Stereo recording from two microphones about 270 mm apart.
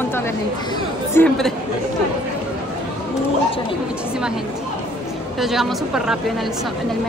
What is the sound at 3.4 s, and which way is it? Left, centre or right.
Speech, centre.